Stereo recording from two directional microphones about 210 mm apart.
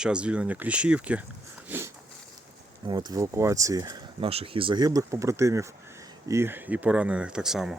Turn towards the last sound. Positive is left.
turn(degrees=0)  # may be behind; listen again after turning